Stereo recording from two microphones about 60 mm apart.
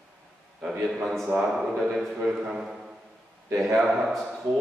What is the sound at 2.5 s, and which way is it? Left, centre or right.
Speech, centre.